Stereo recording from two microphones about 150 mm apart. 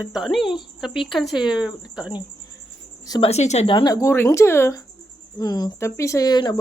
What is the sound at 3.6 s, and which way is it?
Speech, 30° left (ahead or behind).